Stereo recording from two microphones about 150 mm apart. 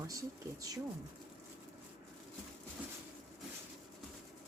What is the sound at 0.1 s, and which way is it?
Speech, 25° right (ahead or behind).